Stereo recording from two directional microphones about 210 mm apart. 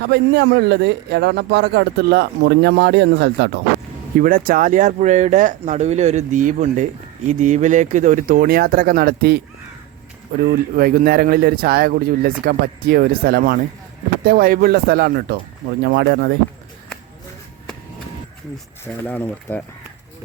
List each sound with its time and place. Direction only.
0.1 s a man's voice: 55° right (ahead or behind)
4.2 s speech: 40° right (ahead or behind)
10.4 s a man's voice: 45° right (ahead or behind)
19.0 s speech: 10° left (ahead or behind)